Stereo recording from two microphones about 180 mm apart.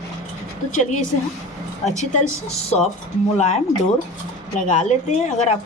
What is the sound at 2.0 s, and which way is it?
A woman's voice, 40° left (ahead or behind).